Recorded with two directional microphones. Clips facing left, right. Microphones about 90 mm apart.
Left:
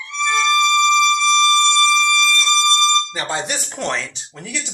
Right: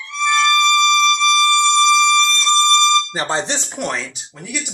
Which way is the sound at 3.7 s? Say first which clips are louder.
Even; 10° right (ahead or behind).